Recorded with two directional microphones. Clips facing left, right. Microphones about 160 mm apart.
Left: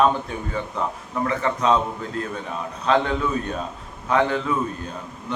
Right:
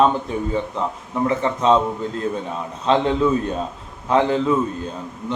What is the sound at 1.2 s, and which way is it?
Mantra, 25° right (ahead or behind).